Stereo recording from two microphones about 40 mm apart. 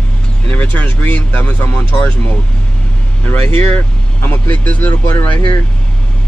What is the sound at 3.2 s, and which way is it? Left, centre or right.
Speech, left.